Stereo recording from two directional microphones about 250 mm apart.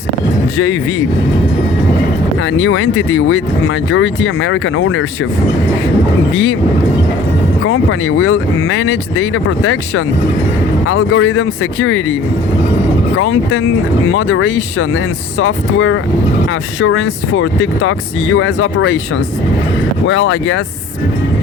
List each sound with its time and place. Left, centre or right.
0.5 s speech: left
2.4 s speech: left
6.3 s speech: left
7.6 s speech: left
13.1 s speech: left
20.1 s speech: left